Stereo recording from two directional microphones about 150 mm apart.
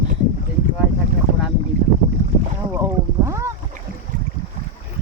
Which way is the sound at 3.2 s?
20° right (ahead or behind).